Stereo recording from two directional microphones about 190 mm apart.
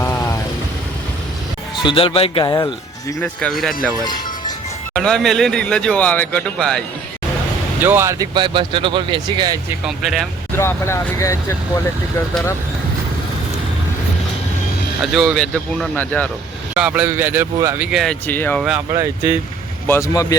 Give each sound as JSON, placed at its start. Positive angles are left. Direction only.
{"t": 0.0, "sound": "vehicle", "side_deg": 15}
{"t": 1.8, "sound": "speech", "side_deg": 25}
{"t": 3.2, "sound": "a man's voice", "side_deg": 5}
{"t": 4.9, "sound": "a man's voice", "side_deg": 5}
{"t": 7.8, "sound": "speech", "side_deg": -10}
{"t": 9.6, "sound": "a man's voice", "side_deg": -5}
{"t": 10.6, "sound": "speech", "side_deg": 15}
{"t": 15.0, "sound": "a man's voice", "side_deg": 0}
{"t": 16.7, "sound": "a man's voice", "side_deg": -5}
{"t": 17.9, "sound": "a man's voice", "side_deg": 5}
{"t": 18.9, "sound": "a man's voice", "side_deg": -15}
{"t": 19.9, "sound": "speech", "side_deg": 15}